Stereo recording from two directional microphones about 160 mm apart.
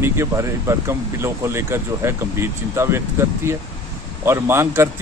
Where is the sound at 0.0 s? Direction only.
15° right (ahead or behind).